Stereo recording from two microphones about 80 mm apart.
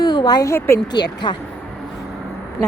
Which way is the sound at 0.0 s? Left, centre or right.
Left.